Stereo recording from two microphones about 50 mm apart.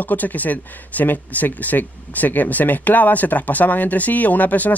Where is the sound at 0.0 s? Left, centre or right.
Left.